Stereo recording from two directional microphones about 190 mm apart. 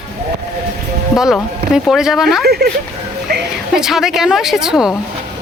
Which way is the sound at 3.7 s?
Centre (ahead or behind).